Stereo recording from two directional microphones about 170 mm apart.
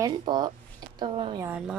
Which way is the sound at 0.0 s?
25° right (ahead or behind).